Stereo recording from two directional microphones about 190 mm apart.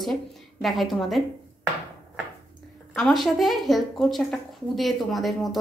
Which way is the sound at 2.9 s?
Centre (ahead or behind).